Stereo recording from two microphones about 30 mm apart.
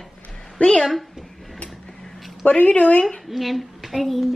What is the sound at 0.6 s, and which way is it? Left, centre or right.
Speech, left.